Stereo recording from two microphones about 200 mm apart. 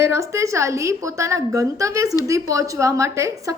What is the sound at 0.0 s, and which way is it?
A woman's voice, 15° right (ahead or behind).